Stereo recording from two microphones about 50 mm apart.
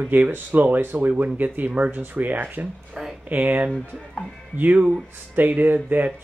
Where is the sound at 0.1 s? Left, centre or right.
Right.